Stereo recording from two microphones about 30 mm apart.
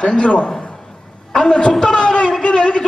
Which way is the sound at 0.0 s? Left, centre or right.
Left.